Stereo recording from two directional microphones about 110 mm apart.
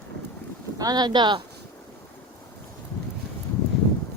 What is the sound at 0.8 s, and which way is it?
Speech, 35° right (ahead or behind).